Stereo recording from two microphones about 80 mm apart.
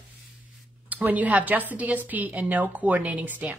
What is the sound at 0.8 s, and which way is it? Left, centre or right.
A woman's voice, right.